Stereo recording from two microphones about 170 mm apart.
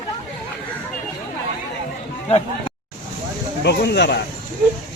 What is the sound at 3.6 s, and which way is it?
Speech, 80° left.